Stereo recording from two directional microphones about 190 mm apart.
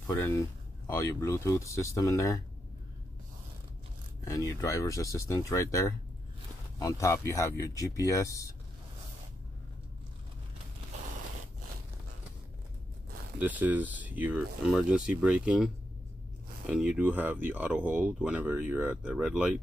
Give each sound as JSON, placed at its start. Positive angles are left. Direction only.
{"t": 0.0, "sound": "speech", "side_deg": 10}
{"t": 4.2, "sound": "speech", "side_deg": 15}
{"t": 13.4, "sound": "speech", "side_deg": -10}